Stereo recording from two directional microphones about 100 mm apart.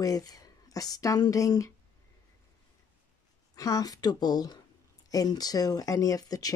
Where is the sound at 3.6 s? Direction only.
35° left (ahead or behind).